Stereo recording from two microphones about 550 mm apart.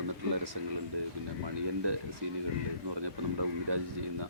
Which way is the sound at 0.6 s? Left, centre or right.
Right.